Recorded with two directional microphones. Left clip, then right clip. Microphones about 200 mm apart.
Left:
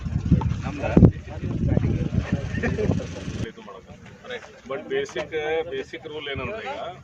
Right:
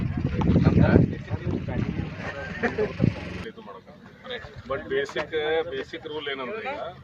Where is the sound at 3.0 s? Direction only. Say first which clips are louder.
Right 4 dB; 45° left (ahead or behind).